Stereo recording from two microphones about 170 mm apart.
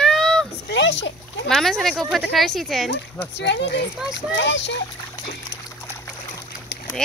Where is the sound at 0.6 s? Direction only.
90° left.